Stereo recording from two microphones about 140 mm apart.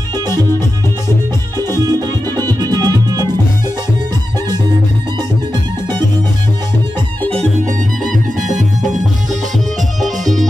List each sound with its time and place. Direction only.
1.8 s music: 30° right (ahead or behind)
8.4 s music: 65° right (ahead or behind)